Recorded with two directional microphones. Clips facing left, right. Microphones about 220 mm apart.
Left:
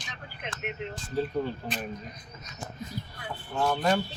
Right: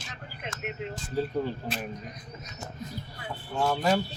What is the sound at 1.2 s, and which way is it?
Speech, 10° right (ahead or behind).